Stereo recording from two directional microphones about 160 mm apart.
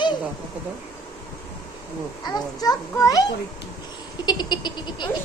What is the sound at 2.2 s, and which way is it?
A child's voice, 25° left (ahead or behind).